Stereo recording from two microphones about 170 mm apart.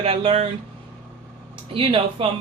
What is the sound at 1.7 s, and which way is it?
Speech, 30° right (ahead or behind).